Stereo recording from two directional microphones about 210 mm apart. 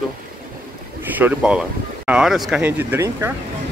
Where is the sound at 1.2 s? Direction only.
5° right (ahead or behind).